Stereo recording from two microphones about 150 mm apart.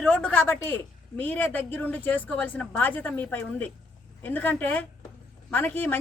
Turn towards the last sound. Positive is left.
turn(degrees=10)  # may be behind; listen again after turning